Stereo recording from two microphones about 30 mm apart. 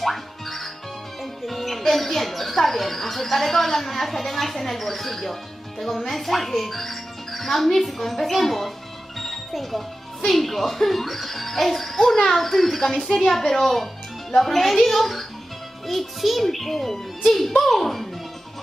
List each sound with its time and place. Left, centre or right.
0.0 s speech: centre